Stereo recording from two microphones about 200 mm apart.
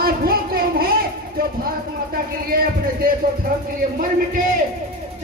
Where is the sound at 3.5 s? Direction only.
45° right (ahead or behind).